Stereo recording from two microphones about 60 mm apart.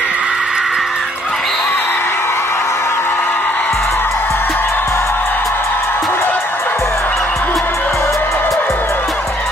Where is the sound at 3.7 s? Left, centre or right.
Left.